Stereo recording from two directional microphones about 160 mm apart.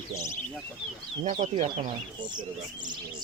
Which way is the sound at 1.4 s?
50° right (ahead or behind).